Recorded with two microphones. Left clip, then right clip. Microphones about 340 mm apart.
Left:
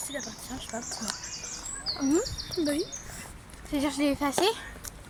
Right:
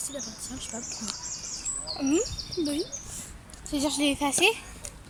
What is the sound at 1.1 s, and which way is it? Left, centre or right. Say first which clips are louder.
Bird: left 1 dB; left.